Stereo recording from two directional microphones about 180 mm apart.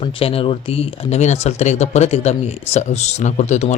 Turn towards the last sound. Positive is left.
turn(degrees=40)  # may be behind; listen again after turning